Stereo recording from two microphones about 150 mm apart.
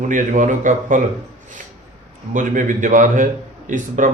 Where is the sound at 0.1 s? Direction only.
55° right (ahead or behind).